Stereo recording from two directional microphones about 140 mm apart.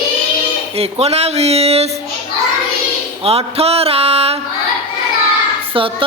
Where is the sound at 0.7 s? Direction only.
45° right (ahead or behind).